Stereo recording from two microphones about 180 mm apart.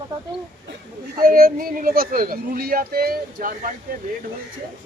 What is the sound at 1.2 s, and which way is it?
Speech, 55° right (ahead or behind).